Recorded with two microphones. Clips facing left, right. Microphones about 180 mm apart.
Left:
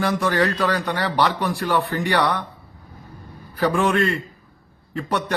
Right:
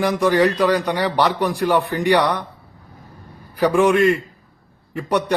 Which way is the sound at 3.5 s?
15° right (ahead or behind).